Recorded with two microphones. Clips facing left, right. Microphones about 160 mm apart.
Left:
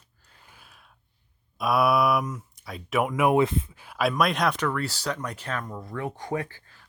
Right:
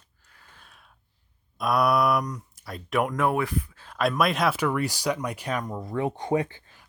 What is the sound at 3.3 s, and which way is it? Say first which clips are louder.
Speech: left 4 dB; 25° left (ahead or behind).